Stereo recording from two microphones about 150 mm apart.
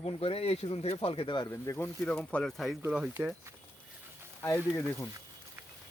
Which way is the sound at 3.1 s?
15° right (ahead or behind).